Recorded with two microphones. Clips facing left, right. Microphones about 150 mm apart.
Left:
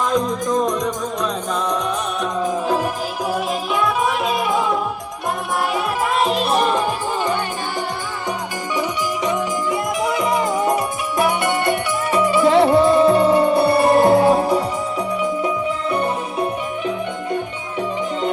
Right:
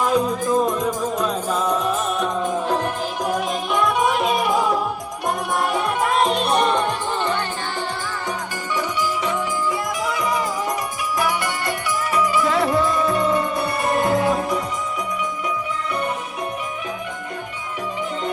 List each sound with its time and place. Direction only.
0.1 s music: 10° right (ahead or behind)
9.2 s music: 20° left (ahead or behind)